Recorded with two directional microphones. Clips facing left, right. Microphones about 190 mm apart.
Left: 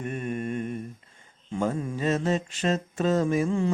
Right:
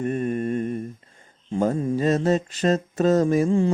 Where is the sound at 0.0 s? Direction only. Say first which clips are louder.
Right 6 dB; 35° right (ahead or behind).